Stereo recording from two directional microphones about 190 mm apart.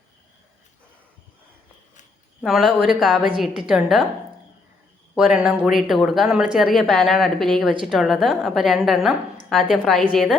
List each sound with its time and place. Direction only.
2.4 s a woman's voice: centre (ahead or behind)
5.1 s a woman's voice: centre (ahead or behind)